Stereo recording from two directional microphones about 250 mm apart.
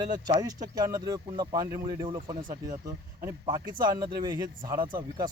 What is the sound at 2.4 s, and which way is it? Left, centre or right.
Speech, right.